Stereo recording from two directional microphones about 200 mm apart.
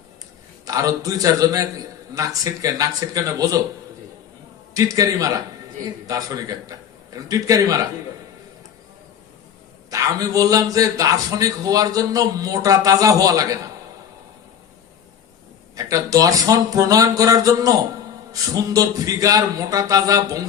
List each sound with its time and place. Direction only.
0.6 s a man's voice: 15° right (ahead or behind)
4.7 s a man's voice: 15° right (ahead or behind)
9.9 s a man's voice: 15° right (ahead or behind)
15.7 s a man's voice: 15° right (ahead or behind)